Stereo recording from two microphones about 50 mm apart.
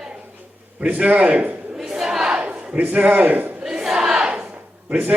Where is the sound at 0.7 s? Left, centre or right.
Right.